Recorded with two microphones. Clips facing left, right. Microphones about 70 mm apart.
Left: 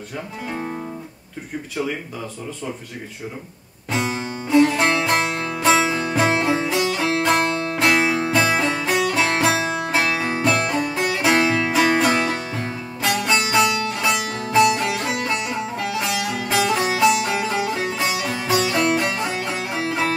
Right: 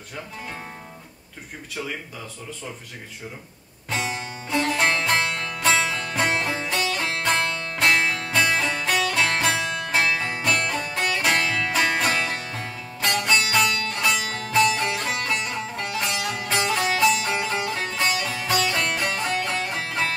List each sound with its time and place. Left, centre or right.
3.9 s music: centre
7.3 s music: left
12.1 s music: left
13.0 s music: centre